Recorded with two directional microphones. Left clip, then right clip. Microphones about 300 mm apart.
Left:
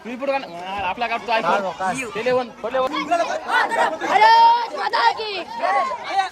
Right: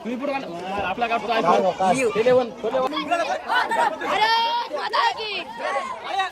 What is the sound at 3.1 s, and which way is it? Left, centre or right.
Speech, right.